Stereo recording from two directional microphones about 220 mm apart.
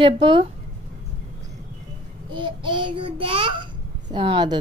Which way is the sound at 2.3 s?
20° right (ahead or behind).